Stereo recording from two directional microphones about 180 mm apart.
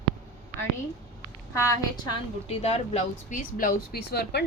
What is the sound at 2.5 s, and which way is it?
Speech, 35° left (ahead or behind).